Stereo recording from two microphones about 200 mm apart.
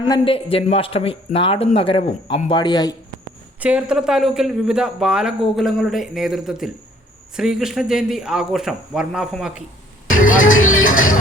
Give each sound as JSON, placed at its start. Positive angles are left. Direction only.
{"t": 0.1, "sound": "speech", "side_deg": 25}
{"t": 3.6, "sound": "a man's voice", "side_deg": -5}
{"t": 10.2, "sound": "vehicle", "side_deg": 40}
{"t": 10.5, "sound": "music", "side_deg": 85}